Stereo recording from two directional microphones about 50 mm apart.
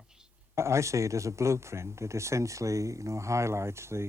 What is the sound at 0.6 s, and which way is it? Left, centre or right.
Speech, right.